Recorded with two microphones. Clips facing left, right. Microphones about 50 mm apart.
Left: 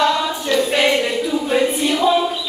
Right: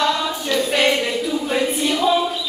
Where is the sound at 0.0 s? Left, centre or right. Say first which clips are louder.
Left 3 dB; centre.